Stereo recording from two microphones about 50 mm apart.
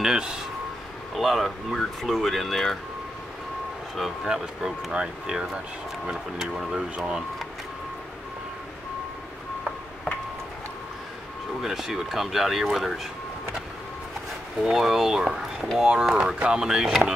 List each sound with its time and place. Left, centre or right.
0.0 s speech: centre
1.1 s speech: centre
3.9 s speech: centre
11.6 s speech: centre
14.6 s speech: centre